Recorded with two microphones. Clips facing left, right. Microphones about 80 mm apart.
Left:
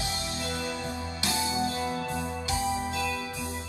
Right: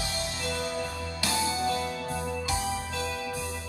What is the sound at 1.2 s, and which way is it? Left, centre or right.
Music, left.